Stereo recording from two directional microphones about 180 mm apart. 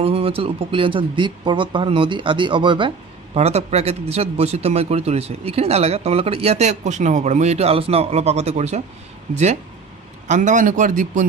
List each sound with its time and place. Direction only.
0.0 s a man's voice: 30° right (ahead or behind); by 11.2 s 45° right (ahead or behind)